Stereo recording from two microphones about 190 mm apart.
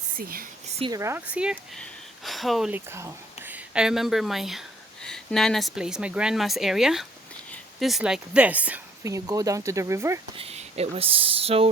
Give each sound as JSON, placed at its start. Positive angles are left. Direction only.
{"t": 0.2, "sound": "speech", "side_deg": -50}
{"t": 0.9, "sound": "speech", "side_deg": -15}
{"t": 10.3, "sound": "speech", "side_deg": -30}